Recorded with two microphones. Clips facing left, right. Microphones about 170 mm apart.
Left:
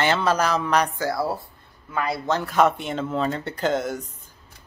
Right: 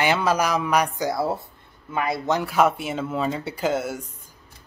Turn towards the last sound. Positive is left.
turn(degrees=-10)  # may be behind; listen again after turning